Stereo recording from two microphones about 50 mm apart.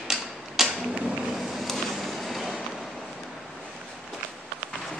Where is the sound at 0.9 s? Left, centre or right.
Right.